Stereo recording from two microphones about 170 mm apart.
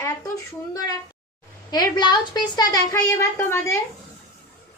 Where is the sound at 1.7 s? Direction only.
25° left (ahead or behind).